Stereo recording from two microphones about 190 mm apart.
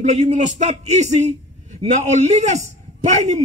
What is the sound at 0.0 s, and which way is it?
A man's voice, 40° right (ahead or behind).